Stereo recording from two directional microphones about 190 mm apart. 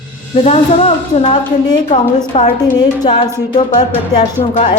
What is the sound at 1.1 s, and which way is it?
A woman's voice, 30° left (ahead or behind).